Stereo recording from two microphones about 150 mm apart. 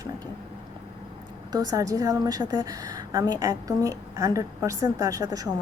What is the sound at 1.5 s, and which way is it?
A woman's voice, 20° right (ahead or behind).